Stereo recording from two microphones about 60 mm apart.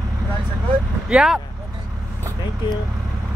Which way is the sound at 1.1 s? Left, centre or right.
Centre.